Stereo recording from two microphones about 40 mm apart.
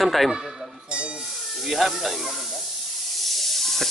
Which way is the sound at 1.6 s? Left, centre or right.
Centre.